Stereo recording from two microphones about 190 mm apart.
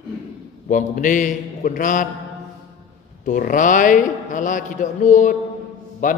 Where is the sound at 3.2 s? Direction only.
45° left (ahead or behind).